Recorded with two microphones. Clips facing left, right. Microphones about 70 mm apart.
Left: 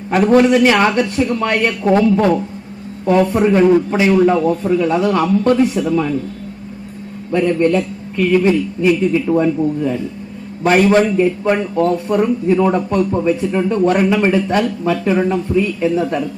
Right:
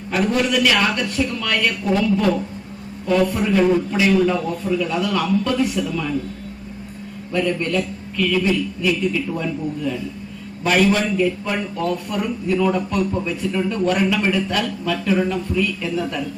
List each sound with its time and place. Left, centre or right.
0.1 s a man's voice: left
0.4 s a man's voice: left
7.3 s a man's voice: left